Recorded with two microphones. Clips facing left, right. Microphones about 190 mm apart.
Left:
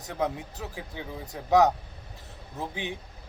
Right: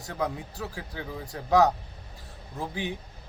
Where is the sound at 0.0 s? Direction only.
20° left (ahead or behind).